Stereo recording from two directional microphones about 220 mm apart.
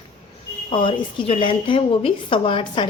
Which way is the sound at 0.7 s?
25° left (ahead or behind).